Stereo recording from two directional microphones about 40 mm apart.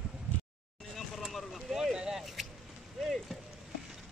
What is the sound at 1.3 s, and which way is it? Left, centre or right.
Boat, centre.